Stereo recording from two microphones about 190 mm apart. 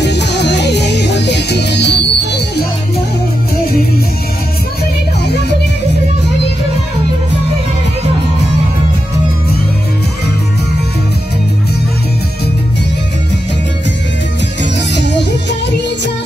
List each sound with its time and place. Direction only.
0.0 s music: 65° left (ahead or behind)
14.6 s music: 65° left (ahead or behind)